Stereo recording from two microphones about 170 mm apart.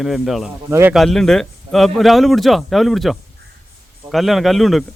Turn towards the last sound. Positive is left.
turn(degrees=0)  # may be behind; listen again after turning